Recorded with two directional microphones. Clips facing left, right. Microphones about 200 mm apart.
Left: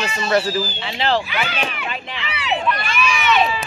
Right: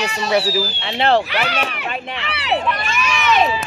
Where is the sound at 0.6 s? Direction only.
75° right (ahead or behind).